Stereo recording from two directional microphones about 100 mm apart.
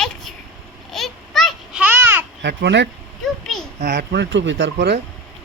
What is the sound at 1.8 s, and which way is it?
Babbling, 20° right (ahead or behind).